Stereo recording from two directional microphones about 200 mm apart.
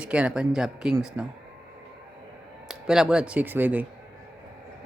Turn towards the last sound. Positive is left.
turn(degrees=-10)  # may be behind; listen again after turning